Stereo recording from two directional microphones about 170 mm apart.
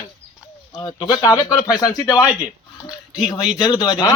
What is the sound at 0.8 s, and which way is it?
Speech, 25° left (ahead or behind).